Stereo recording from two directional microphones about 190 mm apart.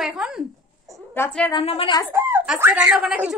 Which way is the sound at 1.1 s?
10° left (ahead or behind).